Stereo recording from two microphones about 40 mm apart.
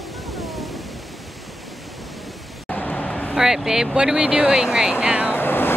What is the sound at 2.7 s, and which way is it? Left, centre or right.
Vehicle, centre.